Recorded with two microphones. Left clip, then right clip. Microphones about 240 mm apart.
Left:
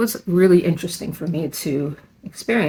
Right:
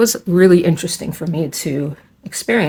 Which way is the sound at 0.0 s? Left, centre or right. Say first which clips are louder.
Right 5 dB; right.